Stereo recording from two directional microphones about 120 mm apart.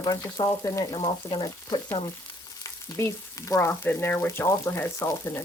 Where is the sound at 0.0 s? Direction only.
30° left (ahead or behind).